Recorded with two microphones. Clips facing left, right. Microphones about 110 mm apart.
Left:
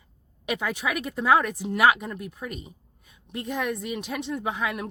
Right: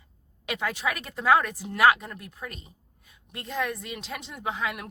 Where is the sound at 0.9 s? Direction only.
20° left (ahead or behind).